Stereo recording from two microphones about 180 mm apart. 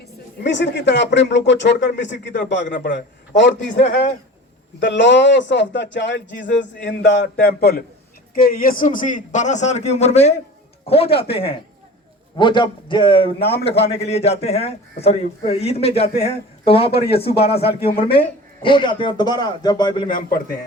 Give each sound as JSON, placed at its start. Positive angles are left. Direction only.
{"t": 0.4, "sound": "a man's voice", "side_deg": 70}
{"t": 4.8, "sound": "a man's voice", "side_deg": 80}
{"t": 7.4, "sound": "a man's voice", "side_deg": 60}
{"t": 20.1, "sound": "a man's voice", "side_deg": 50}